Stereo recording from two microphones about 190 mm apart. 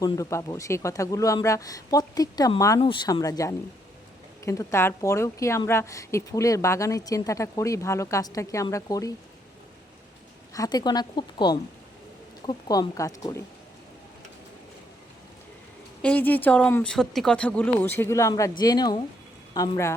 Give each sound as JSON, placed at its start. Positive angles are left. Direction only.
{"t": 0.0, "sound": "a woman's voice", "side_deg": 15}
{"t": 10.5, "sound": "speech", "side_deg": 20}
{"t": 16.0, "sound": "a woman's voice", "side_deg": 5}